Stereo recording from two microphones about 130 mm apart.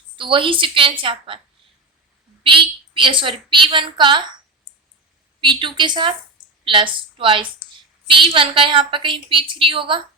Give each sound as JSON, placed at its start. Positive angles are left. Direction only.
{"t": 0.2, "sound": "a woman's voice", "side_deg": -40}
{"t": 2.5, "sound": "a woman's voice", "side_deg": -40}
{"t": 5.4, "sound": "a woman's voice", "side_deg": -40}